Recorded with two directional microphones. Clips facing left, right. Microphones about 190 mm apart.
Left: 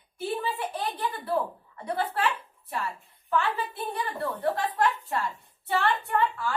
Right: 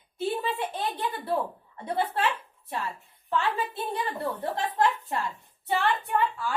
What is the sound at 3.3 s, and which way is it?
Speech, 25° right (ahead or behind).